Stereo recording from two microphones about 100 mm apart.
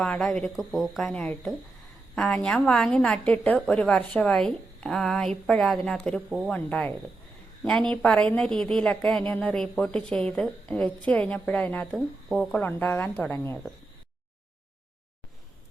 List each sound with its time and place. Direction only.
0.0 s a woman's voice: 5° left (ahead or behind)
11.9 s speech: centre (ahead or behind)
12.5 s speech: 20° left (ahead or behind)